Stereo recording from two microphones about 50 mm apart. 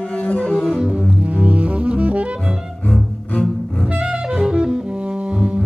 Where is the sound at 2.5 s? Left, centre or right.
Centre.